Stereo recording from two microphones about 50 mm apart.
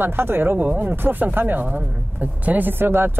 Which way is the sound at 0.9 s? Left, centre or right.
Right.